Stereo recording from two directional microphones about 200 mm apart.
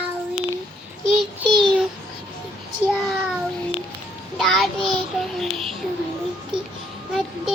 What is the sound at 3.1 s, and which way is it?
Child singing, centre (ahead or behind).